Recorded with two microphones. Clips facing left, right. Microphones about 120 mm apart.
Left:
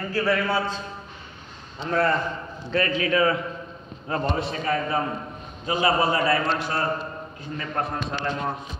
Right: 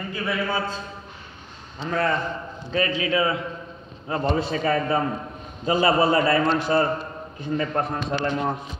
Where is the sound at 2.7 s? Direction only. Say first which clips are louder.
Even; 40° left (ahead or behind).